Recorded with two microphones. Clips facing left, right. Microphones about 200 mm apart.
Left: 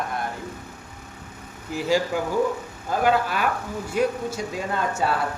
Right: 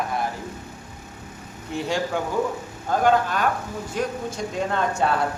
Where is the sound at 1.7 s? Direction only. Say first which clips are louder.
Right 1 dB; 5° left (ahead or behind).